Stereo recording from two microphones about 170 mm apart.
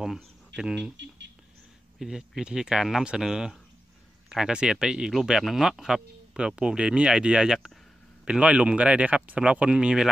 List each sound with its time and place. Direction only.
0.6 s speech: 5° right (ahead or behind)
0.9 s speech: 90° right
2.0 s speech: 5° right (ahead or behind)